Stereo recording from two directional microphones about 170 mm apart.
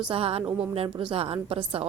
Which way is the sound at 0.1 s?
35° right (ahead or behind).